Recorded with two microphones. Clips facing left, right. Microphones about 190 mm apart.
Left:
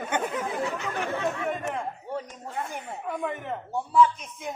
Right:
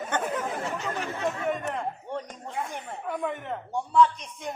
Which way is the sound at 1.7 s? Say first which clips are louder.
Even; 5° left (ahead or behind).